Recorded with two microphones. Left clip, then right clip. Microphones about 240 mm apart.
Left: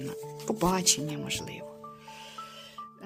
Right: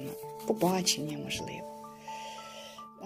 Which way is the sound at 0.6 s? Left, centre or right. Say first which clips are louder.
Left 2 dB; left.